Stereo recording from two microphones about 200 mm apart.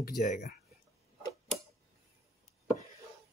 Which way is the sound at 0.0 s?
40° left (ahead or behind).